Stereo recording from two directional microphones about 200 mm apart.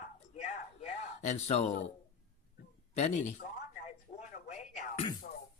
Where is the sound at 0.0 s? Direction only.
35° left (ahead or behind).